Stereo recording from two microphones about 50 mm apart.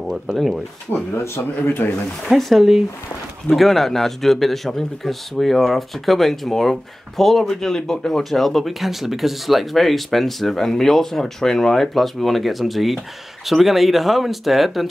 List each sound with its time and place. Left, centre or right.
0.0 s speech: centre
1.1 s speech: left
2.3 s a man's voice: centre